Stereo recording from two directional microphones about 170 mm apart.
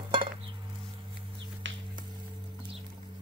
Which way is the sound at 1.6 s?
90° right.